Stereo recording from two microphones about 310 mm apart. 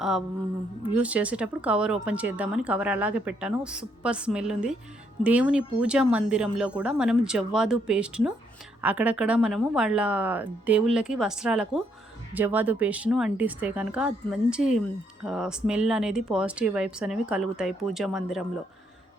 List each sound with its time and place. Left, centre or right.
0.9 s speech: centre